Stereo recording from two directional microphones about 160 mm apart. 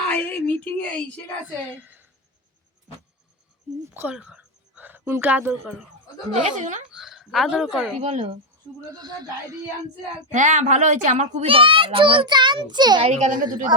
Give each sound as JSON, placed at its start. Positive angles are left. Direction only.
{"t": 0.1, "sound": "a sound", "side_deg": 10}
{"t": 1.8, "sound": "speech", "side_deg": -10}
{"t": 3.9, "sound": "speech", "side_deg": -10}
{"t": 6.3, "sound": "a child's voice", "side_deg": -50}
{"t": 6.9, "sound": "a woman's voice", "side_deg": 0}
{"t": 8.0, "sound": "a child's voice", "side_deg": -40}
{"t": 8.9, "sound": "speech", "side_deg": -25}
{"t": 10.3, "sound": "a child's voice", "side_deg": -50}
{"t": 13.1, "sound": "a child's voice", "side_deg": -45}